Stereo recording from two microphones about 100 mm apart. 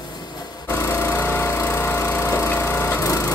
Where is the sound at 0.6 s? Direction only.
25° left (ahead or behind).